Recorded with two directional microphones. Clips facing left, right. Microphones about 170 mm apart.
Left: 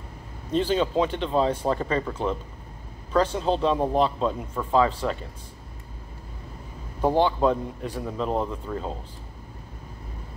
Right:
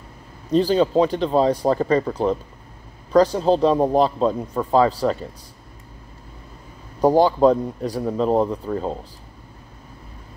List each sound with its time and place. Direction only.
0.5 s speech: 35° right (ahead or behind)
7.0 s speech: 40° right (ahead or behind)